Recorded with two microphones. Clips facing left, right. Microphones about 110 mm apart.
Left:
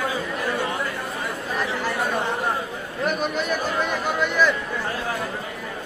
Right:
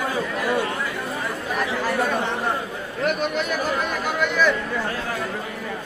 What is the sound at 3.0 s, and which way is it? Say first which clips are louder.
Chatter: right 1 dB; centre (ahead or behind).